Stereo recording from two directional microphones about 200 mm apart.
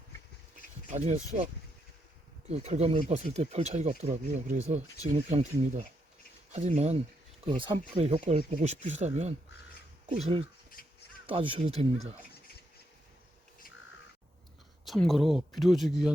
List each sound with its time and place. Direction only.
0.9 s speech: 35° right (ahead or behind)
2.5 s speech: 30° right (ahead or behind)
14.8 s speech: centre (ahead or behind)